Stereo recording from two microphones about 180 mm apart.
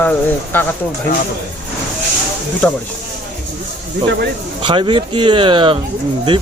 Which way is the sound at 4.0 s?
65° right (ahead or behind).